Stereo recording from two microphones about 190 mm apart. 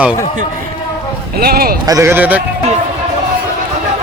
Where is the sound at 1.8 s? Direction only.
15° right (ahead or behind).